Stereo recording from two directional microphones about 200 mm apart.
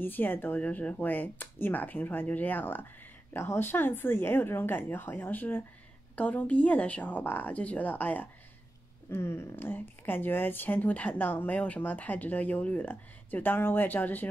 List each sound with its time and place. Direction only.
0.0 s speech: 10° left (ahead or behind)